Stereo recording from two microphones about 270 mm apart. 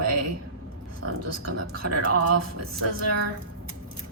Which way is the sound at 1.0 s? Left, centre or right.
Right.